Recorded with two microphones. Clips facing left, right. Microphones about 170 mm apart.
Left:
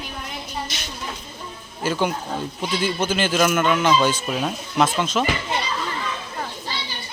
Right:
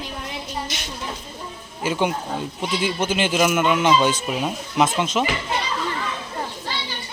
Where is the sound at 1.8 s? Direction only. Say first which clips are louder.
Even; 15° right (ahead or behind).